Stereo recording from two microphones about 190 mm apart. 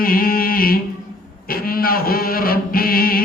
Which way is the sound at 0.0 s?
50° left (ahead or behind).